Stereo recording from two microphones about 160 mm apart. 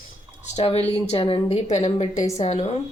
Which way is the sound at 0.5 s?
40° left (ahead or behind).